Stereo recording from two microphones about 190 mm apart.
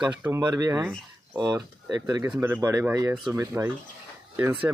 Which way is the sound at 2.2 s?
10° right (ahead or behind).